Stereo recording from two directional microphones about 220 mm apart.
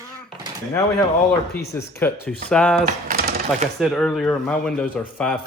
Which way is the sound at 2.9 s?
40° right (ahead or behind).